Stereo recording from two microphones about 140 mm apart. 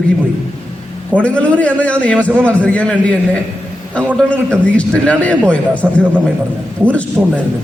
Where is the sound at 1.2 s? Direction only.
10° left (ahead or behind).